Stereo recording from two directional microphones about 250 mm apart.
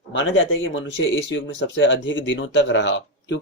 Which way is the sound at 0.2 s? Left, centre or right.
Left.